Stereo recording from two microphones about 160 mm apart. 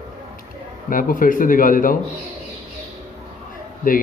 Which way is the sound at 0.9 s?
60° left (ahead or behind).